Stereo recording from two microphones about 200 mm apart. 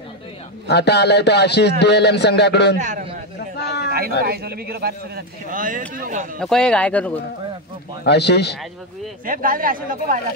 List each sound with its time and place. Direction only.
0.7 s a man's voice: 55° left (ahead or behind)
2.8 s a man's voice: 35° right (ahead or behind)
3.6 s a sound: 55° left (ahead or behind)
4.3 s speech: 50° right (ahead or behind)
6.4 s speech: 5° left (ahead or behind)
8.0 s a man's voice: 55° left (ahead or behind)
9.2 s speech: 45° right (ahead or behind)